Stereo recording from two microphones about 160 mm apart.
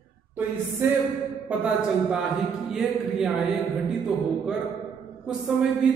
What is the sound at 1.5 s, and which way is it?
A man's voice, 5° right (ahead or behind).